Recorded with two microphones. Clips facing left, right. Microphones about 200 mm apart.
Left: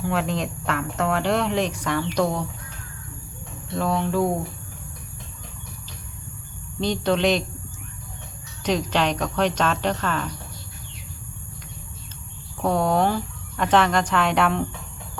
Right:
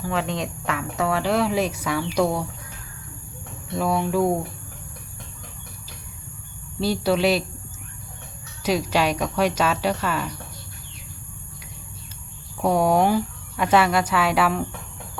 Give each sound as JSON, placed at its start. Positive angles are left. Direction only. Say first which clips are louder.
{"t": 0.0, "sound": "speech", "louder": "left 1 dB", "side_deg": 0}
{"t": 3.8, "sound": "speech", "louder": "right 1 dB", "side_deg": -10}
{"t": 6.7, "sound": "speech", "louder": "right 1 dB", "side_deg": -5}
{"t": 8.6, "sound": "speech", "louder": "right 1 dB", "side_deg": -10}
{"t": 12.6, "sound": "speech", "louder": "right 2 dB", "side_deg": -10}